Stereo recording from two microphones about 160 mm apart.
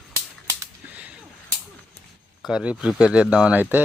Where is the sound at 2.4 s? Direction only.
5° right (ahead or behind).